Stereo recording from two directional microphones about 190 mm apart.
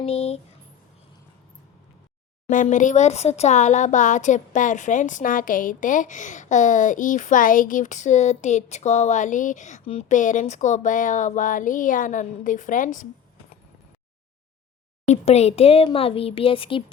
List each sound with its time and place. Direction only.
0.0 s a sound: 30° left (ahead or behind)
2.5 s speech: 40° left (ahead or behind)
15.0 s speech: 35° left (ahead or behind)